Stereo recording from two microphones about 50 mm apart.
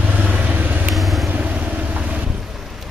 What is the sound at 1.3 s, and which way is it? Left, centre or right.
Vehicle, right.